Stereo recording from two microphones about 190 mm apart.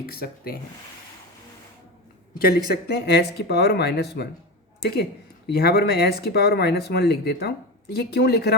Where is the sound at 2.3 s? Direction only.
55° left (ahead or behind).